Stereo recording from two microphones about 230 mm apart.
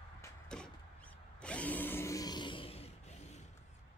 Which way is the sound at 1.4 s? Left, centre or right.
Centre.